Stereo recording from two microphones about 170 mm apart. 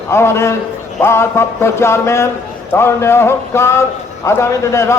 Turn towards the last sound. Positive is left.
turn(degrees=15)  # may be behind; listen again after turning